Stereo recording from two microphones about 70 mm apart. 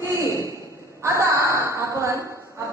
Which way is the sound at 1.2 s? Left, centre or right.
Right.